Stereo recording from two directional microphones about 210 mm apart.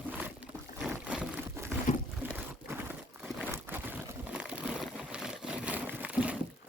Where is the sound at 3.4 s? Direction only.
10° right (ahead or behind).